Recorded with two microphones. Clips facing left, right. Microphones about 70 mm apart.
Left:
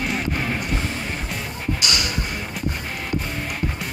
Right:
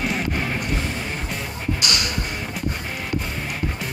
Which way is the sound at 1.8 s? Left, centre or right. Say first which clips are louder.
Even; right.